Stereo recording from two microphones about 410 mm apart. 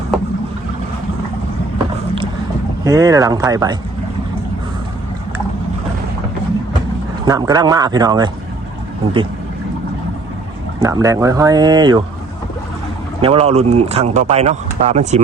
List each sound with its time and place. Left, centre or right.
0.1 s boat: centre
2.8 s speech: centre
7.3 s speech: centre
10.8 s speech: centre
13.2 s speech: centre